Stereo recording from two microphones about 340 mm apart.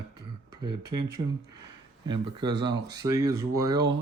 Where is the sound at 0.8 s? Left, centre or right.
Right.